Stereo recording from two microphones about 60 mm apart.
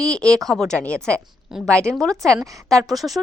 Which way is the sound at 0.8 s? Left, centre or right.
Centre.